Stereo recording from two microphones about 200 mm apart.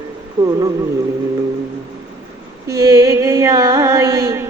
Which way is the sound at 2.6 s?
20° right (ahead or behind).